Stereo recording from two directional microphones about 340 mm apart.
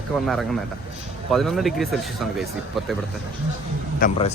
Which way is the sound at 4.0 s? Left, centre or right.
Centre.